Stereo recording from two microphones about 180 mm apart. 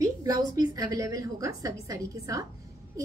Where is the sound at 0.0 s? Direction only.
20° right (ahead or behind).